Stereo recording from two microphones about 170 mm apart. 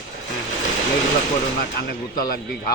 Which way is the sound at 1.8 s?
60° left (ahead or behind).